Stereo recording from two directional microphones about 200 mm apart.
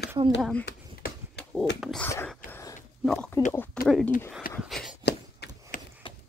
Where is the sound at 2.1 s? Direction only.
10° left (ahead or behind).